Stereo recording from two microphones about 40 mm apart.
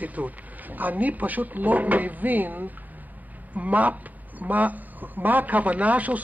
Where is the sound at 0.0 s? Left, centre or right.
Right.